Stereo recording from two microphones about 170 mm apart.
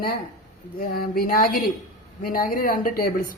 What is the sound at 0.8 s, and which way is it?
A woman's voice, 55° left (ahead or behind).